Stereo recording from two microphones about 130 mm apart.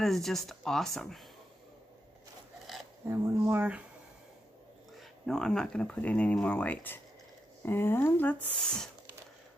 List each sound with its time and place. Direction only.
0.0 s speech: centre (ahead or behind)
3.1 s speech: 20° right (ahead or behind)
5.2 s speech: 5° left (ahead or behind)